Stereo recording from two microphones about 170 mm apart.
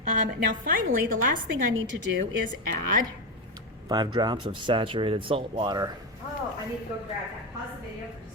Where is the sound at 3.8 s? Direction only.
25° right (ahead or behind).